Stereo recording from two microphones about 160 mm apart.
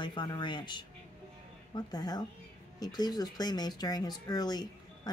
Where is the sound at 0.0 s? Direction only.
30° left (ahead or behind).